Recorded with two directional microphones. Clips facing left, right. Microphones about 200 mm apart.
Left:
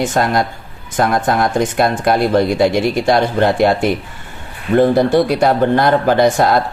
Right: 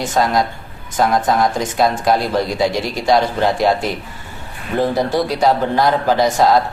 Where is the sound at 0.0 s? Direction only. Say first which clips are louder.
Left 1 dB; 55° left (ahead or behind).